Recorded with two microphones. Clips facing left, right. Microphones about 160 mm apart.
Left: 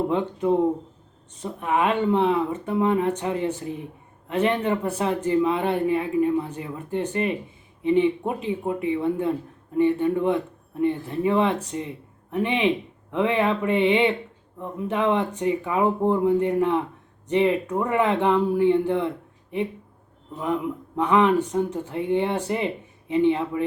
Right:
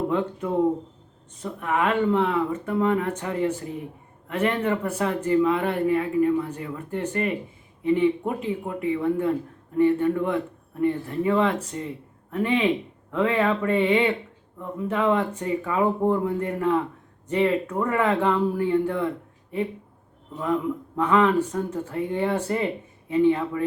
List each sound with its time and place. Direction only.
0.1 s speech: 20° left (ahead or behind)